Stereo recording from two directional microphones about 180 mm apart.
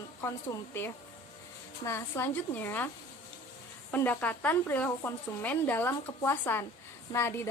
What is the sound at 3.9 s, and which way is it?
A woman's voice, 10° left (ahead or behind).